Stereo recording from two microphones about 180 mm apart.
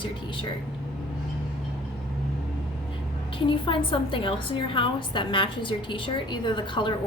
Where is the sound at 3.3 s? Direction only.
30° left (ahead or behind).